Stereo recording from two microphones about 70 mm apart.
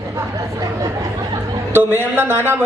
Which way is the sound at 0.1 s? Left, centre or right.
Right.